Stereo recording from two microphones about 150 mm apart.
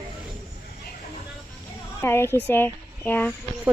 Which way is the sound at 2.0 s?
15° left (ahead or behind).